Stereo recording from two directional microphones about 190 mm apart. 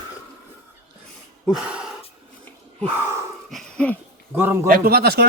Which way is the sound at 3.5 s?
5° left (ahead or behind).